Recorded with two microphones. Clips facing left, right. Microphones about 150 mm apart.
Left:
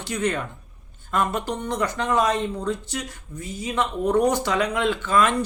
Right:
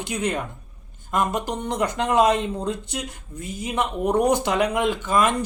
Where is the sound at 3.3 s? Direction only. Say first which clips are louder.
Even; 55° right (ahead or behind).